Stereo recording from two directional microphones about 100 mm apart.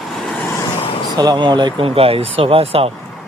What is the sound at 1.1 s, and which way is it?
Speech, 40° right (ahead or behind).